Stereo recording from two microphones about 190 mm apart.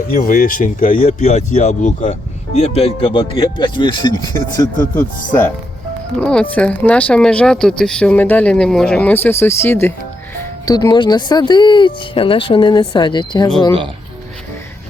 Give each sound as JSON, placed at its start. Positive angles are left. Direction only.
{"t": 0.1, "sound": "speech", "side_deg": 45}
{"t": 4.9, "sound": "speech", "side_deg": 10}